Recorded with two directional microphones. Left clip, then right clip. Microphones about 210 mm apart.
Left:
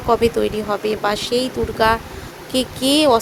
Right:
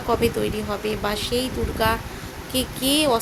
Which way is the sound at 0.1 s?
20° left (ahead or behind).